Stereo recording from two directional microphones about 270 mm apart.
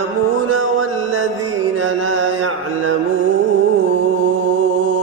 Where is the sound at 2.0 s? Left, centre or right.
Right.